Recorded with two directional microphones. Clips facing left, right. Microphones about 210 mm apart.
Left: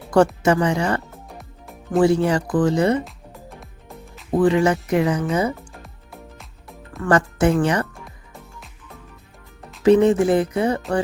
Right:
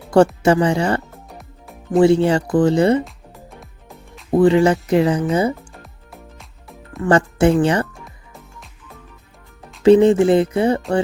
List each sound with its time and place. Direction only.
0.4 s speech: 30° right (ahead or behind)
1.1 s music: centre (ahead or behind)
2.0 s speech: 25° right (ahead or behind)
3.0 s music: centre (ahead or behind)
4.3 s speech: 25° right (ahead or behind)
5.5 s music: centre (ahead or behind)
7.0 s speech: 30° right (ahead or behind)
8.0 s music: centre (ahead or behind)
9.8 s speech: 30° right (ahead or behind)